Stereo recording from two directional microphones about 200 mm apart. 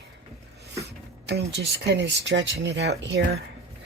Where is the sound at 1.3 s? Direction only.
55° right (ahead or behind).